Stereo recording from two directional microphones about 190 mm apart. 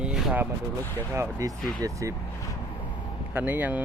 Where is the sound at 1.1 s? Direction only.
15° right (ahead or behind).